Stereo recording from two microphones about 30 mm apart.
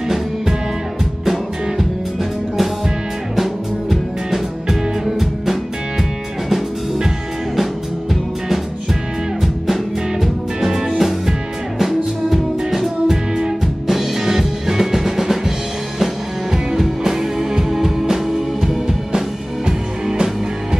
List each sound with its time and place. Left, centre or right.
3.9 s music: centre
10.2 s music: centre
13.1 s music: centre
13.9 s drum: centre
16.5 s music: centre
19.1 s music: right